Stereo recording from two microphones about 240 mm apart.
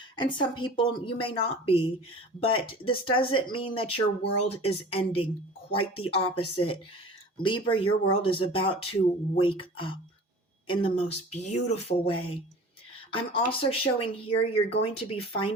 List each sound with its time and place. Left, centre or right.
0.2 s speech: centre
13.1 s speech: left